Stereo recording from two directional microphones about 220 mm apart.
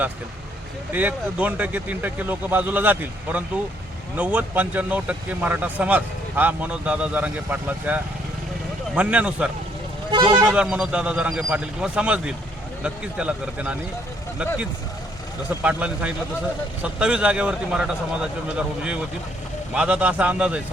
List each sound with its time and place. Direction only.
0.9 s speech: 5° right (ahead or behind)
10.1 s speech: 20° right (ahead or behind)
10.5 s speech: 5° right (ahead or behind)
15.4 s speech: 5° right (ahead or behind)